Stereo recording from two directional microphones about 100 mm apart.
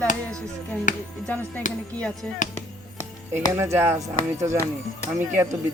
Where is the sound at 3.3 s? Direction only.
25° right (ahead or behind).